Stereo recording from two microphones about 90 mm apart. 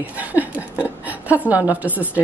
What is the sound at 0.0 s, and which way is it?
Chuckle, 20° right (ahead or behind).